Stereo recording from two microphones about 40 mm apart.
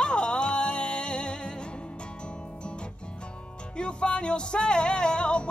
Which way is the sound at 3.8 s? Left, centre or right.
Left.